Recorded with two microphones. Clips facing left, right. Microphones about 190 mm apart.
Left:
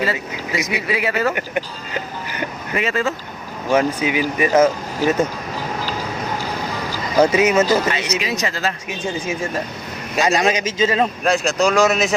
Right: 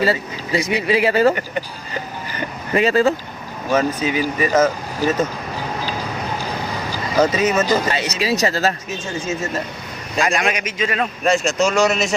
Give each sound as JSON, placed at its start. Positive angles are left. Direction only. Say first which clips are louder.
{"t": 0.0, "sound": "speech", "louder": "right 3 dB", "side_deg": -30}
{"t": 1.4, "sound": "speech", "louder": "left 2 dB", "side_deg": 15}
{"t": 2.7, "sound": "speech", "louder": "right 6 dB", "side_deg": -35}
{"t": 3.7, "sound": "speech", "louder": "left 1 dB", "side_deg": 15}
{"t": 7.2, "sound": "speech", "louder": "left 2 dB", "side_deg": 10}
{"t": 7.9, "sound": "speech", "louder": "right 2 dB", "side_deg": -35}
{"t": 8.9, "sound": "speech", "louder": "left 1 dB", "side_deg": 15}
{"t": 10.2, "sound": "a man's voice", "louder": "left 5 dB", "side_deg": 25}
{"t": 11.2, "sound": "speech", "louder": "even", "side_deg": 0}